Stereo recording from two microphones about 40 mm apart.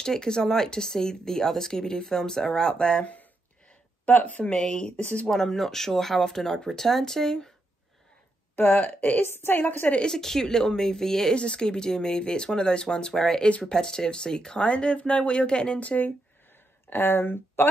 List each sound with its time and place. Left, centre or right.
0.0 s speech: centre
4.0 s speech: left
4.7 s speech: left
5.2 s speech: centre
8.6 s speech: left
9.2 s a woman's voice: left
9.6 s a woman's voice: left
10.1 s speech: centre
11.3 s speech: left
15.8 s speech: left
16.9 s speech: left